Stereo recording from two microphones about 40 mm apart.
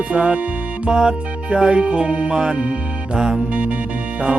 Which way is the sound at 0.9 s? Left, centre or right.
Centre.